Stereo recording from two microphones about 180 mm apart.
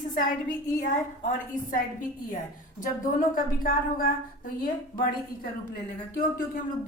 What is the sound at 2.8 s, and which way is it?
A woman's voice, 50° left (ahead or behind).